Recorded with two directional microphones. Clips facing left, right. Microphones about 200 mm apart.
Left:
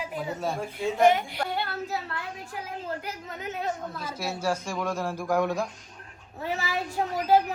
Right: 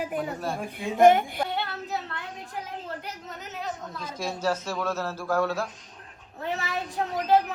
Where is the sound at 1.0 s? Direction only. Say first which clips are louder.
Right 4 dB; 50° right (ahead or behind).